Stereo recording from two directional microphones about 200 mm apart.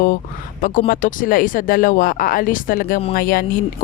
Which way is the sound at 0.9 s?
45° left (ahead or behind).